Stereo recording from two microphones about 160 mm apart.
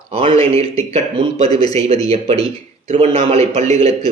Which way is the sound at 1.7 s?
40° right (ahead or behind).